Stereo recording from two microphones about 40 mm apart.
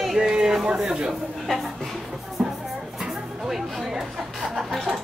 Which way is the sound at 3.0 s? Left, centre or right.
Centre.